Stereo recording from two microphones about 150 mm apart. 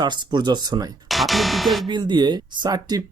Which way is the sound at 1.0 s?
Centre (ahead or behind).